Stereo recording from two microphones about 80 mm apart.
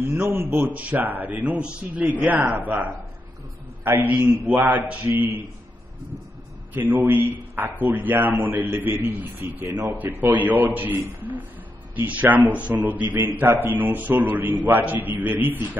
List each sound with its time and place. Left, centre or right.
0.0 s a man's voice: right
6.7 s a man's voice: right